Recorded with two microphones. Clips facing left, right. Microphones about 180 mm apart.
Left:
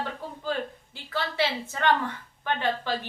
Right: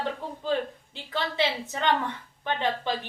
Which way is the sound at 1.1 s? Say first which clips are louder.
Even; 20° right (ahead or behind).